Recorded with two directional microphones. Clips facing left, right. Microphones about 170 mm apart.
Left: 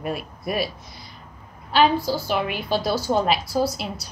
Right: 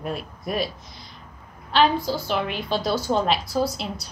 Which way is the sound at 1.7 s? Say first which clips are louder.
Left 1 dB; 5° left (ahead or behind).